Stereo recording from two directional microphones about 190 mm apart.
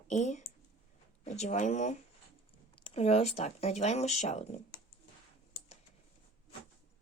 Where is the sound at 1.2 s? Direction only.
40° left (ahead or behind).